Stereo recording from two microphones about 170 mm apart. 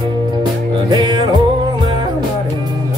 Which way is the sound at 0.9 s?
25° right (ahead or behind).